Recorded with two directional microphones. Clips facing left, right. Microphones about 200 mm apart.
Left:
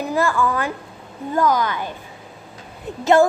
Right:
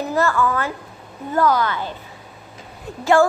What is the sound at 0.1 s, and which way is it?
A woman's voice, 15° left (ahead or behind).